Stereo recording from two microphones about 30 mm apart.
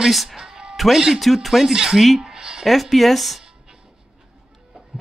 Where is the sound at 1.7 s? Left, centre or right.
Right.